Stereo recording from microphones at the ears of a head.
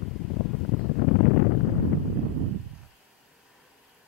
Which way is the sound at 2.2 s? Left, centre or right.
Right.